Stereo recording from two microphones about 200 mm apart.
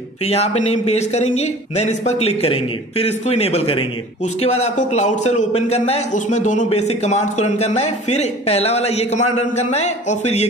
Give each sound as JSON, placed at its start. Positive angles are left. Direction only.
{"t": 0.3, "sound": "speech", "side_deg": 30}